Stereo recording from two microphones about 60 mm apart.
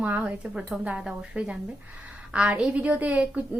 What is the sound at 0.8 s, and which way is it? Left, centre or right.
A woman's voice, centre.